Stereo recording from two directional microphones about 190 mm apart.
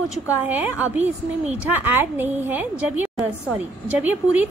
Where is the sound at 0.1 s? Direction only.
10° right (ahead or behind).